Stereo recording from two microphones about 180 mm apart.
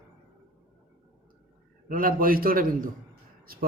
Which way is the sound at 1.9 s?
50° right (ahead or behind).